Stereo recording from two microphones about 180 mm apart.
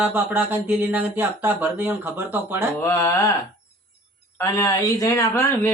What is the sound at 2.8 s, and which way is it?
Speech, 15° left (ahead or behind).